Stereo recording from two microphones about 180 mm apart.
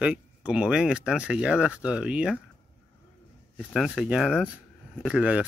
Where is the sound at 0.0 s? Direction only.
5° right (ahead or behind).